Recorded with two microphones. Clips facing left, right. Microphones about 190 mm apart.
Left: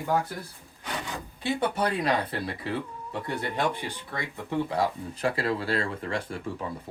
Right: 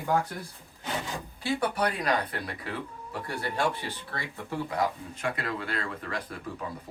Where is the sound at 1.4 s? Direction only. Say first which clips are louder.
Left 1 dB; 25° left (ahead or behind).